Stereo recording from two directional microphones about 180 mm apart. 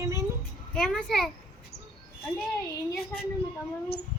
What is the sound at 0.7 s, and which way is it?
Speech, 5° left (ahead or behind).